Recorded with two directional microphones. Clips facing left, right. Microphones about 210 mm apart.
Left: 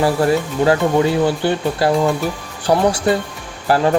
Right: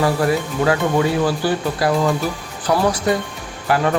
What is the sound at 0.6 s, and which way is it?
Speech, 30° left (ahead or behind).